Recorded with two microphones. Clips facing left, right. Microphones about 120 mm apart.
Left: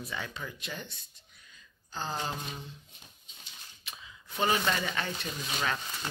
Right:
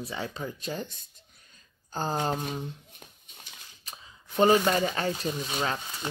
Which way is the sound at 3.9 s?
40° right (ahead or behind).